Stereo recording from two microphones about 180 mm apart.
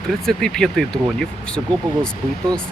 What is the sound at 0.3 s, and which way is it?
Speech, 5° left (ahead or behind).